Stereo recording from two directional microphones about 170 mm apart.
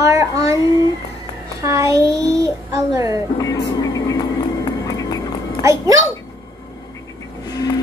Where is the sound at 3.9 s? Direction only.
20° left (ahead or behind).